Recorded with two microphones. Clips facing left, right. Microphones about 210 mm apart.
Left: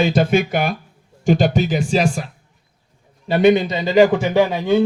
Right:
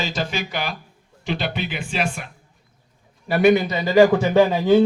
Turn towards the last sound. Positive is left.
turn(degrees=-5)  # may be behind; listen again after turning